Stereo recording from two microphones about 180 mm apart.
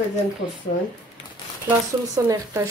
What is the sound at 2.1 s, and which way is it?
Speech, 20° right (ahead or behind).